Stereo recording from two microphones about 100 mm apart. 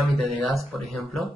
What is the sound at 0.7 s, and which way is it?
Speech, centre (ahead or behind).